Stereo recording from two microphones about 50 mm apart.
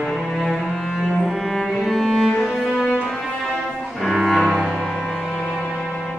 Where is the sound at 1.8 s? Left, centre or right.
Centre.